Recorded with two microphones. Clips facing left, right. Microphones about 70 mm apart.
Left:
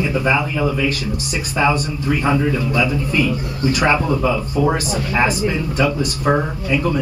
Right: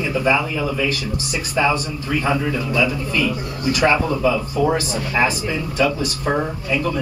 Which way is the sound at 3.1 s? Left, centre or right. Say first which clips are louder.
Left 2 dB; left.